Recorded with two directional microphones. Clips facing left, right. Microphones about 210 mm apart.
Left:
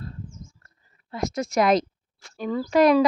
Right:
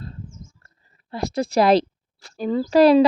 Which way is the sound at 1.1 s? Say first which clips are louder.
Right 3 dB; 35° right (ahead or behind).